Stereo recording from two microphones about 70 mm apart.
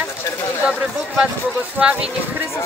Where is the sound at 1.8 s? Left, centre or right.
Centre.